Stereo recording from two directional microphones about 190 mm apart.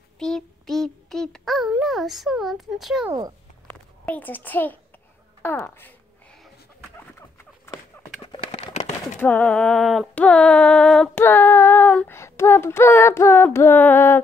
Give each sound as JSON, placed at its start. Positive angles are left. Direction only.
{"t": 0.2, "sound": "child singing", "side_deg": 0}
{"t": 3.1, "sound": "a sound", "side_deg": -20}
{"t": 4.0, "sound": "female singing", "side_deg": 10}
{"t": 7.2, "sound": "rodents", "side_deg": 15}
{"t": 8.3, "sound": "a sound", "side_deg": 30}
{"t": 9.2, "sound": "female singing", "side_deg": 10}